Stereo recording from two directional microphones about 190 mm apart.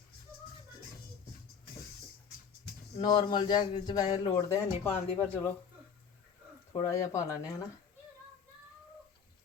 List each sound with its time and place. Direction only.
3.0 s speech: 20° left (ahead or behind)
6.7 s speech: 15° left (ahead or behind)